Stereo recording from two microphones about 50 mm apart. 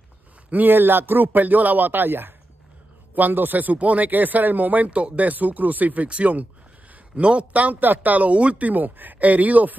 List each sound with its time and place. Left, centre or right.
0.5 s speech: right
6.0 s speech: right